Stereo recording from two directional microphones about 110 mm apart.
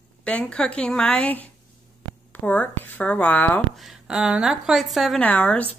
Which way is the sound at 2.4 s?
15° left (ahead or behind).